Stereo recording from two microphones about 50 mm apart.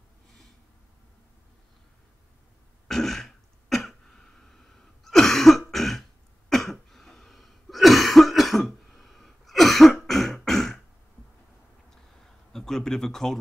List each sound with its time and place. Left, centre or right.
2.9 s throat clearing: centre
5.0 s cough: centre
10.0 s a sound: centre
12.5 s speech: centre